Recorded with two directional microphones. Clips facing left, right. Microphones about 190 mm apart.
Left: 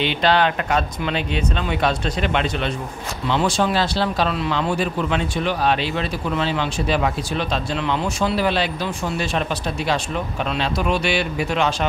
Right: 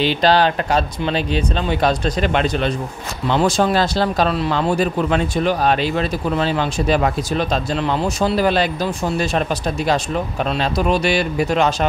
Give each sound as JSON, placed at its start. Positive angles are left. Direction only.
{"t": 0.0, "sound": "speech", "side_deg": -35}
{"t": 10.4, "sound": "speech", "side_deg": -40}